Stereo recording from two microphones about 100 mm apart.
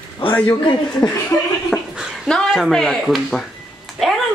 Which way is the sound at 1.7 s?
Centre (ahead or behind).